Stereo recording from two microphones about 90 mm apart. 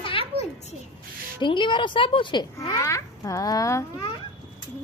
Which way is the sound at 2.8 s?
35° left (ahead or behind).